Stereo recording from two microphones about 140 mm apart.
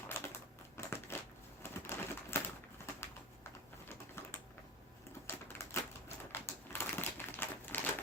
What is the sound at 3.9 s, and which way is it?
Typing, 15° left (ahead or behind).